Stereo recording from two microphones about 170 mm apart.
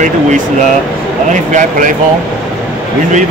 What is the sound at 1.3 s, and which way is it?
Speech, 45° right (ahead or behind).